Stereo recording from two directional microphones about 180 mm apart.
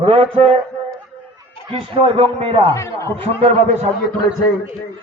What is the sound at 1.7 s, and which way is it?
Speech, 30° right (ahead or behind).